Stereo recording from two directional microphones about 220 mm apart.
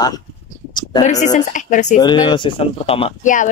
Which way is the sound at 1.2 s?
35° left (ahead or behind).